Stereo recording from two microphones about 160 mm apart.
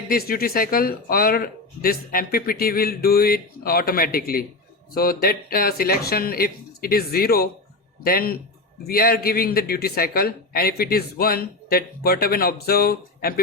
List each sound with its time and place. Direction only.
0.1 s speech: 70° left (ahead or behind)